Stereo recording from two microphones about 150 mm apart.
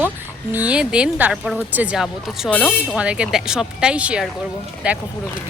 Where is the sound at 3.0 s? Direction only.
5° right (ahead or behind).